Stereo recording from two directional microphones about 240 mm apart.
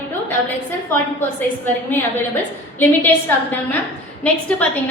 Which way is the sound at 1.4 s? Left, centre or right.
Centre.